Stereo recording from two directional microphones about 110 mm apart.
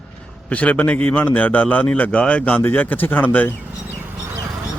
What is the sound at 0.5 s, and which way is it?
A man's voice, 15° left (ahead or behind).